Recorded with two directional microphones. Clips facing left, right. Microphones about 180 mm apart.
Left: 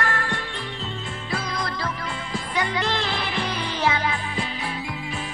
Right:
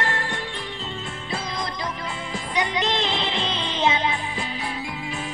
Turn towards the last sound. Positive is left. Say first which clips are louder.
# right 1 dB
turn(degrees=-20)  # may be behind; listen again after turning